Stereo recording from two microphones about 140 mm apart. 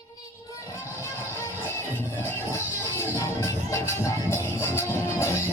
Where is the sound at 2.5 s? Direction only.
20° left (ahead or behind).